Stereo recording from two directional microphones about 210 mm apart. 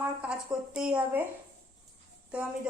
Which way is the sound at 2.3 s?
5° right (ahead or behind).